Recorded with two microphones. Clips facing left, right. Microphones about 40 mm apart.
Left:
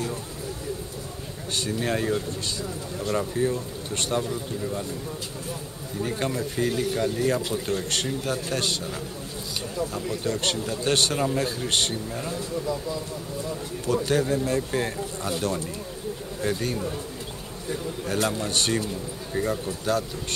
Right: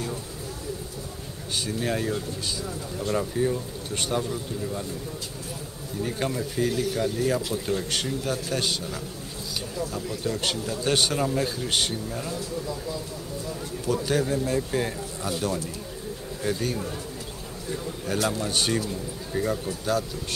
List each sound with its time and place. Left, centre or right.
1.5 s a man's voice: centre
5.9 s speech: centre
9.8 s a man's voice: centre
10.2 s a man's voice: centre
13.8 s a man's voice: centre
18.0 s speech: centre